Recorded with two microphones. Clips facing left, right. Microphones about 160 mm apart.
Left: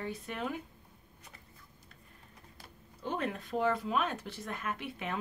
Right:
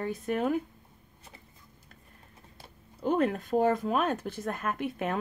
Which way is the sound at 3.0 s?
45° right (ahead or behind).